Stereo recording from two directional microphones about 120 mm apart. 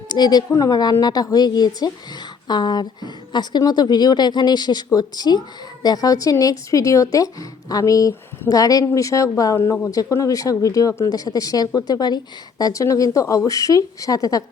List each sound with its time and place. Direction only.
0.1 s a woman's voice: 35° left (ahead or behind)